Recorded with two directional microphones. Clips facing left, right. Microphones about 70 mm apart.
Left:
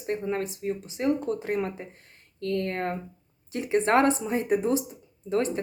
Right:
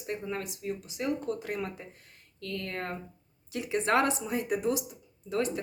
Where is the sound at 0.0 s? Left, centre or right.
Left.